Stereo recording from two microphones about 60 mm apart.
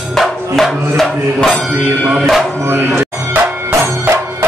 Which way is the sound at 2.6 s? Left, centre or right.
Right.